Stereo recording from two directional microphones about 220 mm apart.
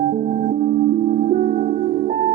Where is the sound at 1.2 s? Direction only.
35° right (ahead or behind).